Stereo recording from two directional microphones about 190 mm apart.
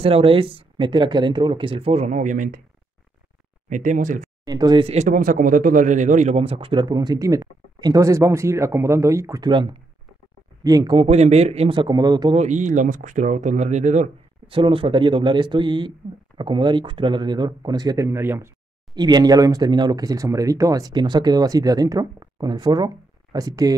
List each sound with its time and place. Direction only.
0.0 s speech: 30° right (ahead or behind)
3.6 s speech: 40° right (ahead or behind)
4.5 s speech: 20° right (ahead or behind)
12.4 s speech: 40° right (ahead or behind); by 23.7 s 20° right (ahead or behind)